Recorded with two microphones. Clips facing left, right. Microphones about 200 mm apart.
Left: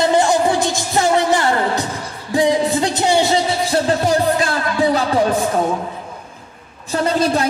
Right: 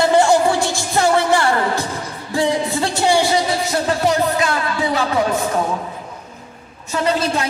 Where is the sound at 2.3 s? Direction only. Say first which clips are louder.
Left 3 dB; 15° left (ahead or behind); by 5.0 s 35° left (ahead or behind).